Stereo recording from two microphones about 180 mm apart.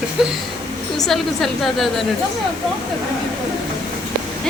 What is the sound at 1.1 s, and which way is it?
Speech, centre (ahead or behind).